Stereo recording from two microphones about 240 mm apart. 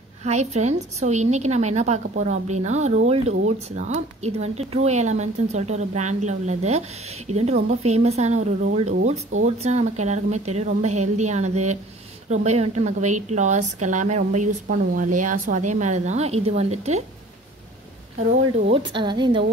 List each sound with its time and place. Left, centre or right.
0.2 s a woman's voice: right
18.7 s a woman's voice: centre